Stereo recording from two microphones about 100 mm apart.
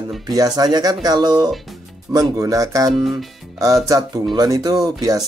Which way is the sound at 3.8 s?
35° right (ahead or behind).